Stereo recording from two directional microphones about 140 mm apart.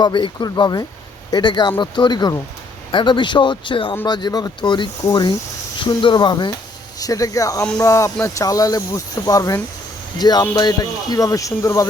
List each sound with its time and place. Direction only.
0.0 s speech: 35° left (ahead or behind)